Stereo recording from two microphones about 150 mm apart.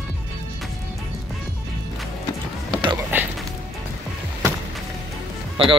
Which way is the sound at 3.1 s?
15° right (ahead or behind).